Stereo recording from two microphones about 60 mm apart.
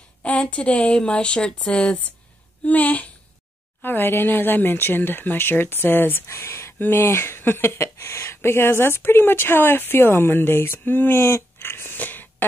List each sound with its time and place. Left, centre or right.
0.2 s speech: centre
2.6 s speech: left
3.8 s speech: left